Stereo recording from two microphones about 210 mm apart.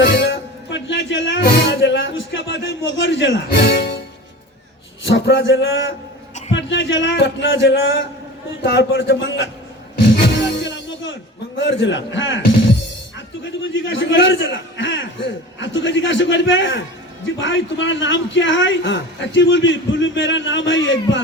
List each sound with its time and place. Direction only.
0.0 s music: 55° left (ahead or behind)
5.0 s a man's voice: 60° left (ahead or behind)
10.4 s music: 60° left (ahead or behind)
11.5 s a man's voice: 65° left (ahead or behind)
13.4 s a man's voice: 65° left (ahead or behind)